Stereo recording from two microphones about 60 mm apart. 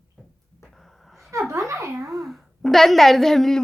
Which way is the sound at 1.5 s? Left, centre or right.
Right.